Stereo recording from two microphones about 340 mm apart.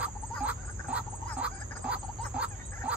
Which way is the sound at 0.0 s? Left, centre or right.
Centre.